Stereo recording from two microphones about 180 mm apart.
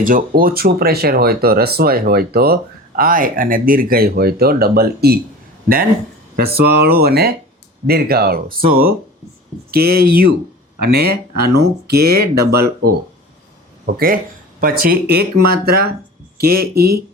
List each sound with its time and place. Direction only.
0.0 s speech: 50° right (ahead or behind)
6.3 s speech: 60° right (ahead or behind)